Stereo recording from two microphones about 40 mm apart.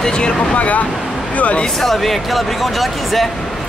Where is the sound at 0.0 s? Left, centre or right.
Left.